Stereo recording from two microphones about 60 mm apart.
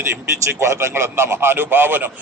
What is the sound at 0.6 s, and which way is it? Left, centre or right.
A man's voice, right.